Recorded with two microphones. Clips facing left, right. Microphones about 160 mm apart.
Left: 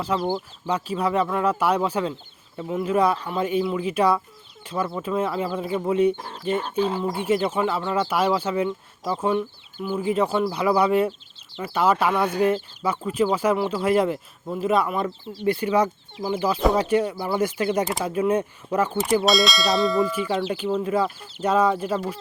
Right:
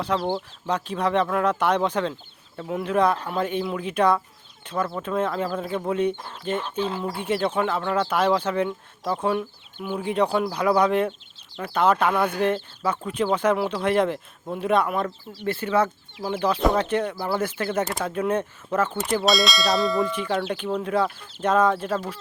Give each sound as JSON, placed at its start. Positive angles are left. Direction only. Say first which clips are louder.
{"t": 0.0, "sound": "speech", "louder": "even", "side_deg": 5}
{"t": 6.6, "sound": "speech", "louder": "left 5 dB", "side_deg": 45}
{"t": 7.4, "sound": "speech", "louder": "even", "side_deg": 5}
{"t": 19.1, "sound": "speech", "louder": "left 2 dB", "side_deg": 0}